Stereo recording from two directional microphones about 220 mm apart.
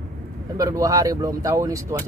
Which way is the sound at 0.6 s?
15° right (ahead or behind).